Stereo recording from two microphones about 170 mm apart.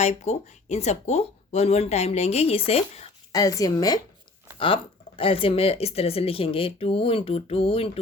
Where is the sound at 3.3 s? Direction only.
20° left (ahead or behind).